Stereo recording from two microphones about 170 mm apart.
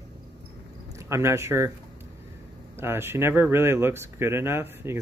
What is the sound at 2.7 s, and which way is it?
Speech, 15° right (ahead or behind).